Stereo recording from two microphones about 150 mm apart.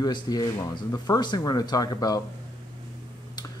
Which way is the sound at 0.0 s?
25° left (ahead or behind).